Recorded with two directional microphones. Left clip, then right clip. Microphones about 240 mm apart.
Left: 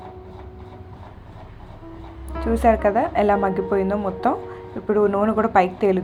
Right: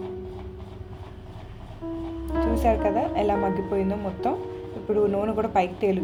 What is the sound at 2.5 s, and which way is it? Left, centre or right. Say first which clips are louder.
A woman's voice: left 7 dB; centre.